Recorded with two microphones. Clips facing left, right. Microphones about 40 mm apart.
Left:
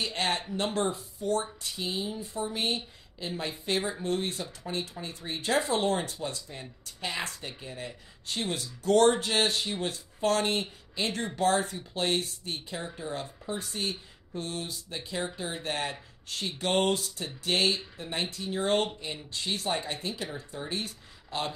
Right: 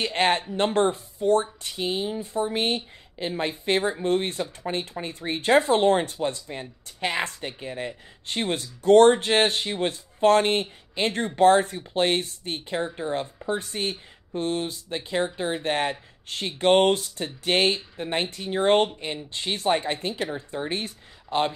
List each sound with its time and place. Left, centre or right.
0.0 s speech: right